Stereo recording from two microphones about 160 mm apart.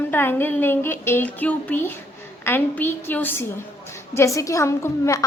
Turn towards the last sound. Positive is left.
turn(degrees=20)  # may be behind; listen again after turning